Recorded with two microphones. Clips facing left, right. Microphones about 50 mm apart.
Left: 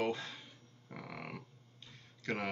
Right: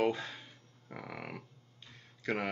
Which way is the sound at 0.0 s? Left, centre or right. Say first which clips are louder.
Right 4 dB; centre.